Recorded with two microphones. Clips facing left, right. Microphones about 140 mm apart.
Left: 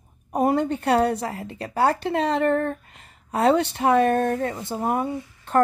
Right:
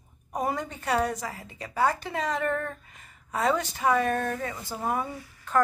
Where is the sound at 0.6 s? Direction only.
60° left (ahead or behind).